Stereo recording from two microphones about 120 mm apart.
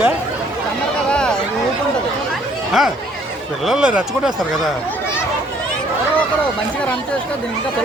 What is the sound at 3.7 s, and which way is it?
Speech, 5° right (ahead or behind).